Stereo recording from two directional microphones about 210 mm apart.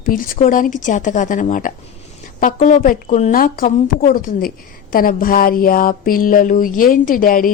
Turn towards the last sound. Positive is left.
turn(degrees=40)  # may be behind; listen again after turning